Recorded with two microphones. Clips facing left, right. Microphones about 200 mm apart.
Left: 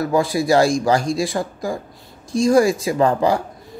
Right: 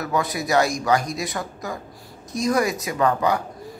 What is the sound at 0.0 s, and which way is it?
Speech, 30° left (ahead or behind).